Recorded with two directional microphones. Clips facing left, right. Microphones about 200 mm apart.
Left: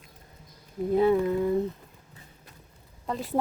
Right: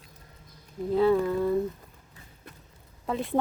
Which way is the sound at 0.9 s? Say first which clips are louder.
Even; 20° left (ahead or behind).